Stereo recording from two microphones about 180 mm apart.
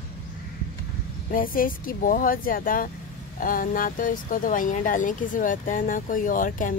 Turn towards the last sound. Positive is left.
turn(degrees=50)  # may be behind; listen again after turning